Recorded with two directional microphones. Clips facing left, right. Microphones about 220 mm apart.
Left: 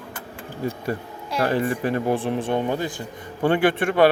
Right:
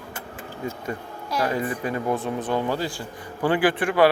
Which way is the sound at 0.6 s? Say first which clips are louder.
Left 4 dB; 35° left (ahead or behind).